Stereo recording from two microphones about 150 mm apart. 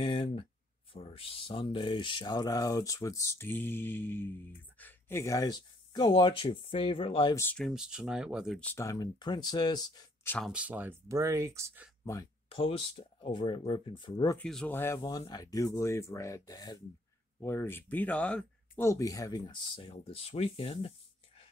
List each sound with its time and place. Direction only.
0.0 s speech: 35° left (ahead or behind)
7.5 s speech: centre (ahead or behind)
8.7 s speech: 20° left (ahead or behind)
10.4 s speech: 5° right (ahead or behind)
12.0 s speech: 20° left (ahead or behind)
12.4 s speech: 40° left (ahead or behind)
14.3 s speech: 5° left (ahead or behind)
15.0 s speech: 25° left (ahead or behind); by 18.9 s 10° left (ahead or behind)
18.9 s speech: 20° left (ahead or behind); by 20.9 s 40° left (ahead or behind)